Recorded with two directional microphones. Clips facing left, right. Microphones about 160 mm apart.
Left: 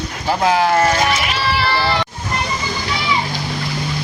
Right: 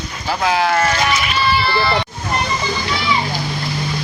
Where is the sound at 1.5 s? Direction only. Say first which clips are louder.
Right 1 dB; 90° left.